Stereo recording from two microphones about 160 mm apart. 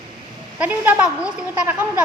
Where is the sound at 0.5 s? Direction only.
10° right (ahead or behind).